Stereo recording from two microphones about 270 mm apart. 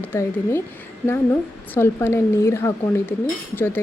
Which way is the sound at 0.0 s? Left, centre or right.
Centre.